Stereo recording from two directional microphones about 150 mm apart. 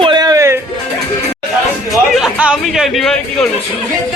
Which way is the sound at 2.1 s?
5° right (ahead or behind).